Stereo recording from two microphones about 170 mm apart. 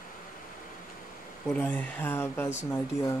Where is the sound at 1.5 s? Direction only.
10° left (ahead or behind).